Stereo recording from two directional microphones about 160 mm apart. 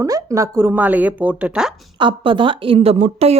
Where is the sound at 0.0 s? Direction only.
20° right (ahead or behind); by 1.9 s centre (ahead or behind).